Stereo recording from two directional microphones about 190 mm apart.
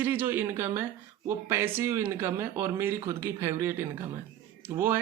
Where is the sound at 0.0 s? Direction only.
10° right (ahead or behind).